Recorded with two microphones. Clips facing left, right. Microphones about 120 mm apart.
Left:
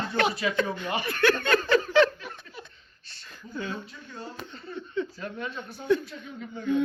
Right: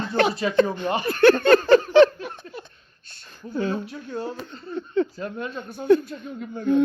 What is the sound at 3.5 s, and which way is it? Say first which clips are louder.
Speech: right 9 dB; 35° right (ahead or behind).